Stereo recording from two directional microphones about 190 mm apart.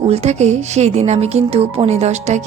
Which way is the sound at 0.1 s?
35° right (ahead or behind).